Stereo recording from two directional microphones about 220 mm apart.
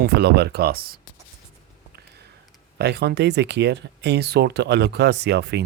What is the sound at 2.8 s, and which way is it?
Speech, 50° right (ahead or behind).